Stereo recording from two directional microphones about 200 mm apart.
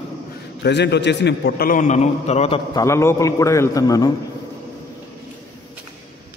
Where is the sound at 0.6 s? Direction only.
55° left (ahead or behind); by 2.8 s 30° left (ahead or behind).